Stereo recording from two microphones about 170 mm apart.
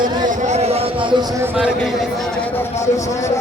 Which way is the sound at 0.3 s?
45° right (ahead or behind).